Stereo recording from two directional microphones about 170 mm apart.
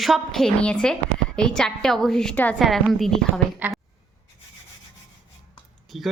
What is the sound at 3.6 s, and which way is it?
Speech, 10° right (ahead or behind).